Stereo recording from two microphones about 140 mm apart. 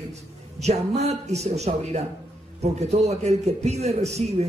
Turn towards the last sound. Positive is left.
turn(degrees=-50)  # may be behind; listen again after turning